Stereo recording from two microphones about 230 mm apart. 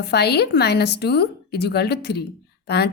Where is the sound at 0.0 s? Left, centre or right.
Left.